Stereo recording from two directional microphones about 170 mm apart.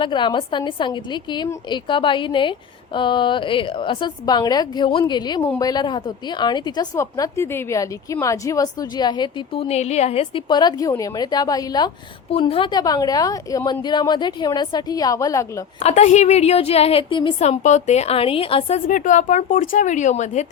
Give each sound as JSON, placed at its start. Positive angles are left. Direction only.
{"t": 0.0, "sound": "a woman's voice", "side_deg": 30}
{"t": 12.3, "sound": "a woman's voice", "side_deg": 35}
{"t": 15.8, "sound": "a woman's voice", "side_deg": 40}
{"t": 18.9, "sound": "speech", "side_deg": 50}